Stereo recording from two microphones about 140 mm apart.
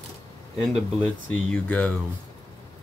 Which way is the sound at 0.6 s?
Centre (ahead or behind).